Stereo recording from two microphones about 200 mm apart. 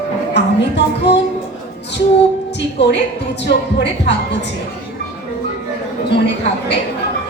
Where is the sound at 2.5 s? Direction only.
60° left (ahead or behind).